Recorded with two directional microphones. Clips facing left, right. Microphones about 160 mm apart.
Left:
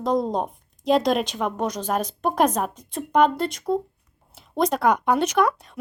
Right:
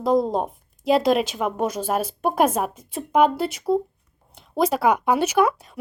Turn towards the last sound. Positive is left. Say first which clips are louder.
# right 1 dB
turn(degrees=-5)  # may be behind; listen again after turning